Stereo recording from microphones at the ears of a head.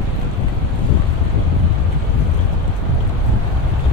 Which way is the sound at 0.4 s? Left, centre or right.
Left.